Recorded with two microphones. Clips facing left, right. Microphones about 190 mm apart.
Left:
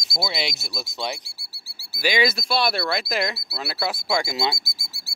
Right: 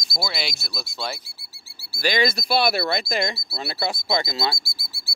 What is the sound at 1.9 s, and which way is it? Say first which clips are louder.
Speech: even; 10° left (ahead or behind).